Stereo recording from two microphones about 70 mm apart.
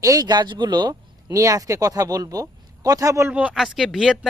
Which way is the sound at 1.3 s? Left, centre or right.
Right.